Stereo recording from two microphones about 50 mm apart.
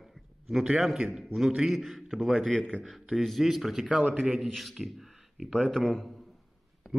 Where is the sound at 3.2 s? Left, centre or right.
Centre.